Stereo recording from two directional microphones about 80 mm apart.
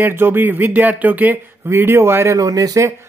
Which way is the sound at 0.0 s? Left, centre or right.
Right.